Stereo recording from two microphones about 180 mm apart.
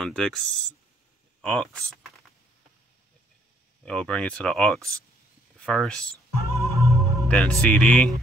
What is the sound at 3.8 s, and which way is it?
Speech, 5° left (ahead or behind).